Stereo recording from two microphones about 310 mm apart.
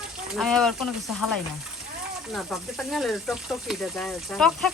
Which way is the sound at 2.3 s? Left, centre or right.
Centre.